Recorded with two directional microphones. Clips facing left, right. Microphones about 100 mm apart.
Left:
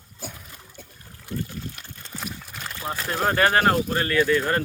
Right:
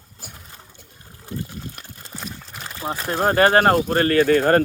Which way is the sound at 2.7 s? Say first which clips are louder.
Right 3 dB; 25° right (ahead or behind).